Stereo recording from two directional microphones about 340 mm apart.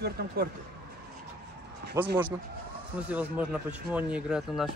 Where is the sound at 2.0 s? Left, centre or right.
Centre.